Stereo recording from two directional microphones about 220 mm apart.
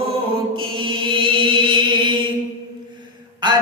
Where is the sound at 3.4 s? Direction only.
20° right (ahead or behind).